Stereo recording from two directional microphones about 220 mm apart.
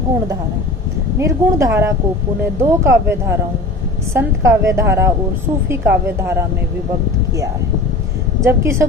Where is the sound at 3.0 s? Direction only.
10° right (ahead or behind).